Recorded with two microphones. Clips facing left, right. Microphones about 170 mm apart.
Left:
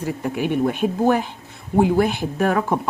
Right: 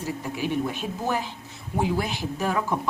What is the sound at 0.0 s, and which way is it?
Speech, 55° left (ahead or behind).